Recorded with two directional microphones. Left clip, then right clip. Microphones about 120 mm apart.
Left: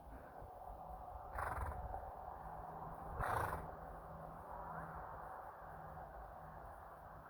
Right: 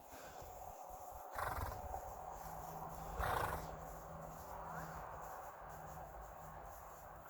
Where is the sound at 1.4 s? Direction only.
10° right (ahead or behind).